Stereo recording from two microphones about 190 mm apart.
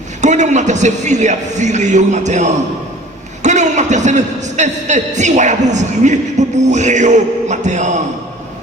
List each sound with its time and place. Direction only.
0.2 s a man's voice: 40° right (ahead or behind)